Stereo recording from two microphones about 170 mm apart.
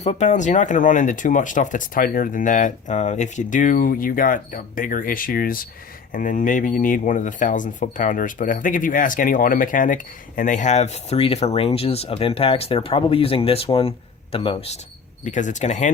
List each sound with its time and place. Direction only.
0.0 s speech: 40° left (ahead or behind)
15.2 s speech: 45° left (ahead or behind)